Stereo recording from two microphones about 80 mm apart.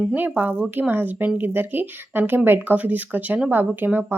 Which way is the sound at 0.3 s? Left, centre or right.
Right.